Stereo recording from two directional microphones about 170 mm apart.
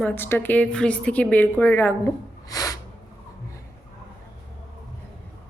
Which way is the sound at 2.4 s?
20° left (ahead or behind).